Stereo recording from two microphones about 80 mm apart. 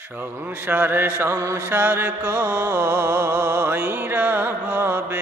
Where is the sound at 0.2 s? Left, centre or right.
Right.